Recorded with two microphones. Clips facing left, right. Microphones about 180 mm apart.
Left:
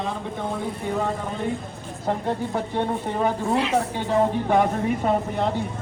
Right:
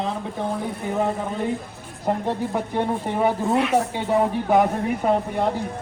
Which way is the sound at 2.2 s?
Centre (ahead or behind).